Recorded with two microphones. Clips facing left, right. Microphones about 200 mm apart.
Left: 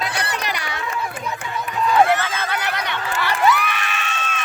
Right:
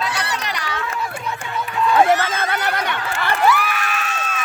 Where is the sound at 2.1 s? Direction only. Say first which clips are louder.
Right 3 dB; 45° right (ahead or behind).